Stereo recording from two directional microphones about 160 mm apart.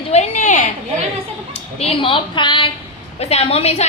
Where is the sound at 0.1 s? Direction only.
45° left (ahead or behind).